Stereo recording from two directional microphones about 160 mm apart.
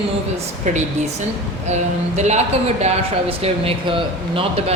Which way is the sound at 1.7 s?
45° right (ahead or behind).